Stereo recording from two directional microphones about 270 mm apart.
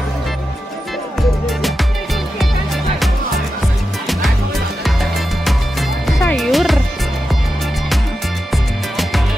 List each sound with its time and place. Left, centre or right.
4.8 s music: centre